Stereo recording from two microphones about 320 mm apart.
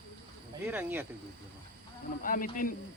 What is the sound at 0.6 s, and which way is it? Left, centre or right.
Speech, centre.